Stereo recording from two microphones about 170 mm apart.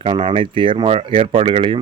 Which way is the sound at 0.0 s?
30° right (ahead or behind).